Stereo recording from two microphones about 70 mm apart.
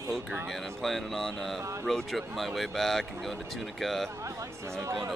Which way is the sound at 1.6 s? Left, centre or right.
Right.